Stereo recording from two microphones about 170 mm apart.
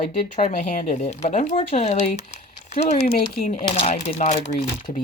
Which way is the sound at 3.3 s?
50° left (ahead or behind).